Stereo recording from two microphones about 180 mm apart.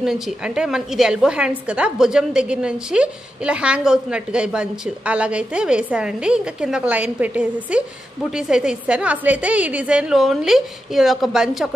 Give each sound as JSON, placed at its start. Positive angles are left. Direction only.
{"t": 0.0, "sound": "a woman's voice", "side_deg": -5}